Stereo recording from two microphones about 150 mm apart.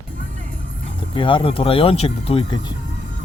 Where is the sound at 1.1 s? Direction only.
35° left (ahead or behind).